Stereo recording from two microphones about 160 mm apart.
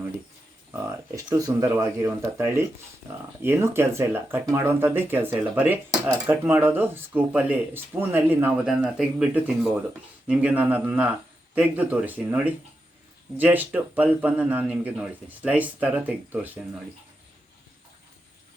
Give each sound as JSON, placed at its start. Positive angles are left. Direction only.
{"t": 0.7, "sound": "speech", "side_deg": -20}